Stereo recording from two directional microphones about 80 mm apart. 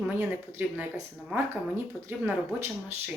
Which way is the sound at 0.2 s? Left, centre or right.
Right.